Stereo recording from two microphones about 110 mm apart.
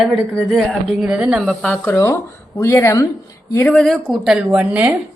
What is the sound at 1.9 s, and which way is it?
Speech, 25° left (ahead or behind).